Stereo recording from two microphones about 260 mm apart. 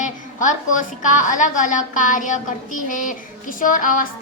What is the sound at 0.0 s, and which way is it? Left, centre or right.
A woman's voice, left.